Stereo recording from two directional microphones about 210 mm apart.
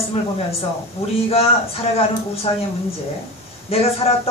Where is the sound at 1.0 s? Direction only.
30° left (ahead or behind).